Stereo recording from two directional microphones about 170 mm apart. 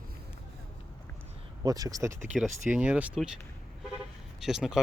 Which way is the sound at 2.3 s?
5° right (ahead or behind).